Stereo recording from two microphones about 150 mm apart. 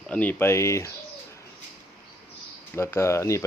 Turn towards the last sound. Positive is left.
turn(degrees=20)  # may be behind; listen again after turning